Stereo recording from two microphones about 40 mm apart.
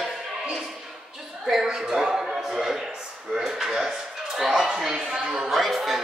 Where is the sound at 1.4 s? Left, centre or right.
Centre.